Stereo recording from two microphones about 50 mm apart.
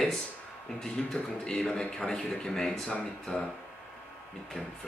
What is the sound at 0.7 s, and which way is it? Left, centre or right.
Speech, centre.